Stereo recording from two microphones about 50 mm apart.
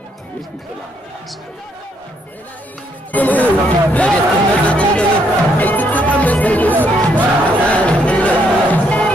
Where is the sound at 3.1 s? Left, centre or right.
Left.